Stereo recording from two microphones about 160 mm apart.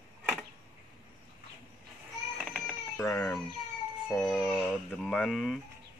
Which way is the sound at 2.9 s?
20° left (ahead or behind).